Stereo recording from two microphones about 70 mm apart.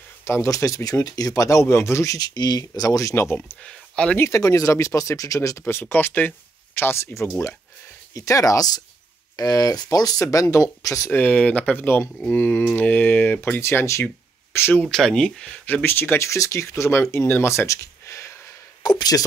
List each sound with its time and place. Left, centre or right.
0.2 s speech: left
2.1 s speech: left
3.6 s speech: centre
4.3 s speech: left
5.7 s speech: left
8.1 s speech: left
11.1 s speech: left
13.6 s speech: left
14.8 s speech: centre
15.6 s speech: left
18.8 s speech: left